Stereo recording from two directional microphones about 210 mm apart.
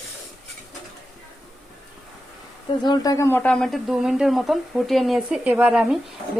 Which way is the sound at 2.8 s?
20° left (ahead or behind).